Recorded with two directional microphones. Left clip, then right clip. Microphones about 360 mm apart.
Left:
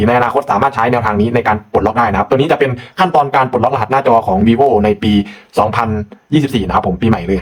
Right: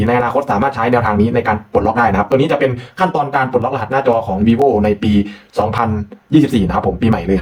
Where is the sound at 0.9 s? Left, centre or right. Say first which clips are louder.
Even; centre.